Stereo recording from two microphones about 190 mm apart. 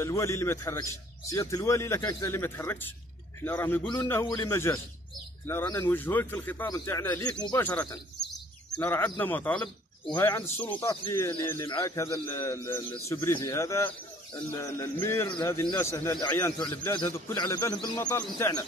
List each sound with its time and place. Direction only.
0.0 s a man's voice: 15° left (ahead or behind)
15.2 s a man's voice: 25° left (ahead or behind); by 18.6 s 10° left (ahead or behind)